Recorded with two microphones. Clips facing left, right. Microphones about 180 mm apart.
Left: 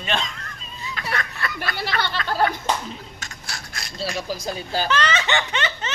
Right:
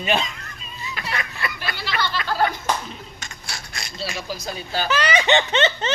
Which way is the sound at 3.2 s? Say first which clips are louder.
Even; centre (ahead or behind).